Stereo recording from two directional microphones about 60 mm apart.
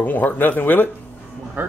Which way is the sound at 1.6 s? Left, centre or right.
Right.